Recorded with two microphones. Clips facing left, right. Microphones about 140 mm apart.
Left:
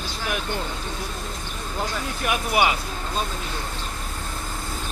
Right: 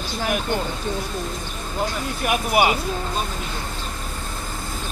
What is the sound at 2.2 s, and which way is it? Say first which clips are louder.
Speech: right 3 dB; 50° right (ahead or behind).